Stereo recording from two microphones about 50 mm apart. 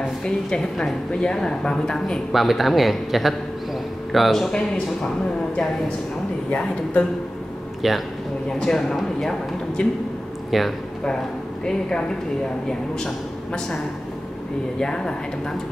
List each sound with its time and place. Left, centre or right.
0.2 s a man's voice: centre
2.3 s speech: centre
4.5 s a man's voice: centre
6.5 s a man's voice: left
7.8 s speech: centre
8.5 s a man's voice: centre
10.5 s speech: centre
12.6 s a man's voice: centre
14.8 s a man's voice: centre